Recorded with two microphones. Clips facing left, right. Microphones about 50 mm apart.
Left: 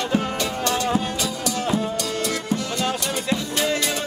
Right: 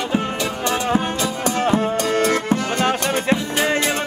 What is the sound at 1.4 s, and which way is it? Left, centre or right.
Music, right.